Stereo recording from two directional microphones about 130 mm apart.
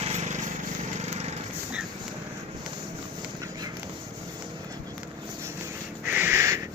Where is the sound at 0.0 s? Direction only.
55° right (ahead or behind).